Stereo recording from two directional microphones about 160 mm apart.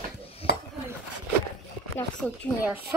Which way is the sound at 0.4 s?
35° left (ahead or behind).